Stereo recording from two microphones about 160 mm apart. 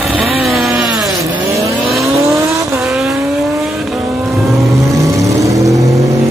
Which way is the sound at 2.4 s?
20° right (ahead or behind).